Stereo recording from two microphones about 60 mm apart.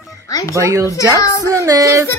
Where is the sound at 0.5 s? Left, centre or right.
Right.